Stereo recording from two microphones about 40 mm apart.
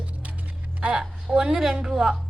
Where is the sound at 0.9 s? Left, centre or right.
Centre.